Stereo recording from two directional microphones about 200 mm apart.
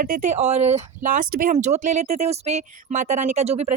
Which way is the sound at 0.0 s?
40° right (ahead or behind).